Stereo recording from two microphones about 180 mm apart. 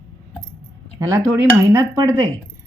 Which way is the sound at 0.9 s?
20° right (ahead or behind).